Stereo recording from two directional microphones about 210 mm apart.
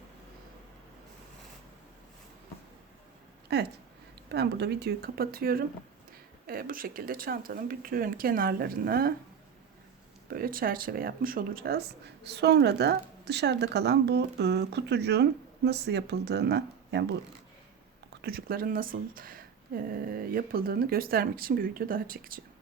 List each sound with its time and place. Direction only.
3.5 s speech: 50° right (ahead or behind)
10.2 s speech: 45° right (ahead or behind)
18.2 s speech: 45° right (ahead or behind)